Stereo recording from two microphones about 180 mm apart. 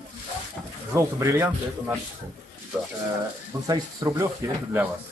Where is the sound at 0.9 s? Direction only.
15° right (ahead or behind).